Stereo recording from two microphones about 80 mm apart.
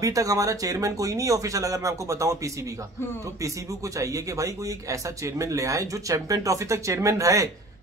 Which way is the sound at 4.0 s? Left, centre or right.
Right.